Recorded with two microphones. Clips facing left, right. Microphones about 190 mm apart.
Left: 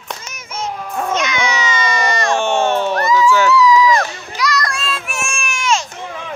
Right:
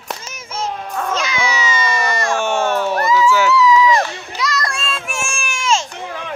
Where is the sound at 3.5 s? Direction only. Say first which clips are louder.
Left 1 dB; 25° right (ahead or behind).